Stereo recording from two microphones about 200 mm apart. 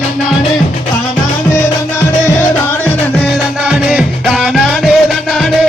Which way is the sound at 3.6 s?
5° right (ahead or behind).